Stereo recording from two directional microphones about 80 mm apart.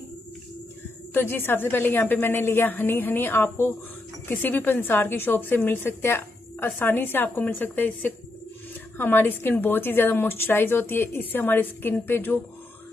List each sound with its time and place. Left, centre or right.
1.1 s a woman's voice: left